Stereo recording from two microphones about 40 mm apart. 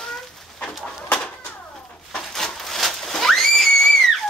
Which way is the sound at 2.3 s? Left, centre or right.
Centre.